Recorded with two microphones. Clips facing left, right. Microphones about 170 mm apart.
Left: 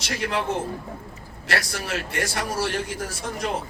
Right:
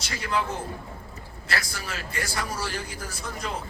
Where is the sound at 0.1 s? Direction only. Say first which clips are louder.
Left 3 dB; 65° left (ahead or behind).